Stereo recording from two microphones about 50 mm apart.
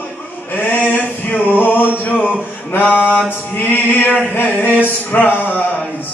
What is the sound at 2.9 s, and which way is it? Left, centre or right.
Mantra, left.